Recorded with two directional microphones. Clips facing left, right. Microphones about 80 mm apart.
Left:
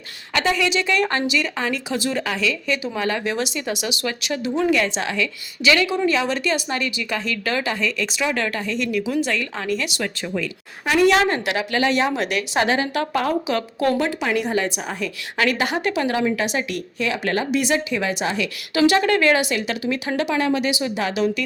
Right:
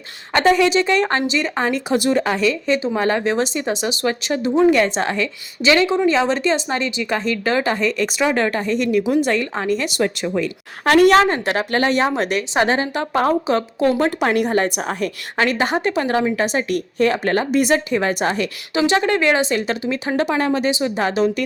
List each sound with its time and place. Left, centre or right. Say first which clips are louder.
0.3 s a woman's voice: right 6 dB; right
0.6 s speech: right 4 dB; right
10.8 s a woman's voice: right 5 dB; right
11.2 s speech: right 3 dB; right
14.0 s a woman's voice: right 4 dB; right
15.4 s speech: right 3 dB; right
18.7 s speech: left 1 dB; right